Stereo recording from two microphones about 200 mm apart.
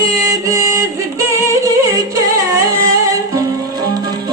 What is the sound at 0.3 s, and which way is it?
Music, 15° right (ahead or behind).